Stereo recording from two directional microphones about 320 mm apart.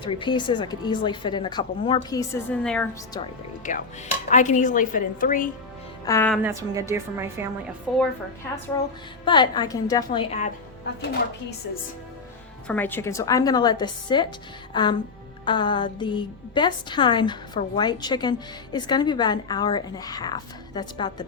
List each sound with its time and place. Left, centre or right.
0.0 s a woman's voice: centre
4.3 s a woman's voice: left
6.1 s a woman's voice: centre
9.2 s a woman's voice: centre
12.6 s a woman's voice: centre
14.7 s music: centre
15.4 s a woman's voice: centre